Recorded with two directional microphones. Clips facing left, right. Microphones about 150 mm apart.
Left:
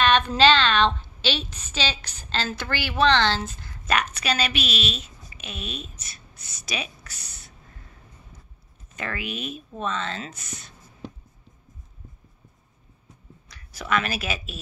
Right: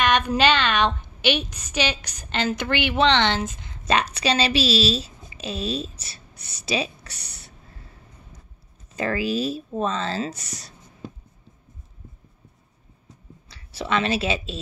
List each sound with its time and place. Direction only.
0.0 s a woman's voice: 10° right (ahead or behind); by 6.2 s 30° right (ahead or behind)
6.3 s a sound: 65° right (ahead or behind)
6.6 s a woman's voice: 30° right (ahead or behind)
7.1 s speech: 65° right (ahead or behind)
8.9 s speech: 30° right (ahead or behind)
13.5 s speech: 30° right (ahead or behind)